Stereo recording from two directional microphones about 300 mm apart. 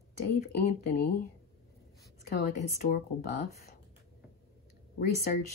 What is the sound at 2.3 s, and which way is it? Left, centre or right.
Speech, left.